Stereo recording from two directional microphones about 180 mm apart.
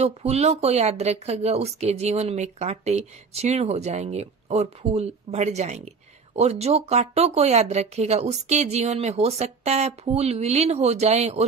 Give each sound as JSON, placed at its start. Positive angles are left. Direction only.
{"t": 0.0, "sound": "speech", "side_deg": -35}